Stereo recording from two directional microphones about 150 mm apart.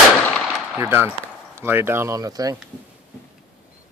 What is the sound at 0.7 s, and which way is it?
Speech, 15° right (ahead or behind).